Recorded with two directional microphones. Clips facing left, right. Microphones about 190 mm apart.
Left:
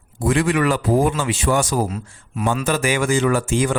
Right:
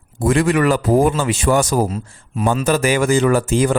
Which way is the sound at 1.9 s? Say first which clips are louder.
Right 3 dB; 30° right (ahead or behind).